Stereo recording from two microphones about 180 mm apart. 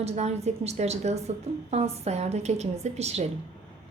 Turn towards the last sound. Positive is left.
turn(degrees=-35)  # may be behind; listen again after turning